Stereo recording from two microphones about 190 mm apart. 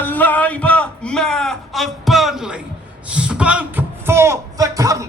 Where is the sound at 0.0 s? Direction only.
10° left (ahead or behind).